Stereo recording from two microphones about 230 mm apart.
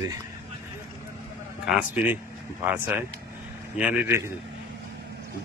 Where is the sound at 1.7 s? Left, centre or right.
Centre.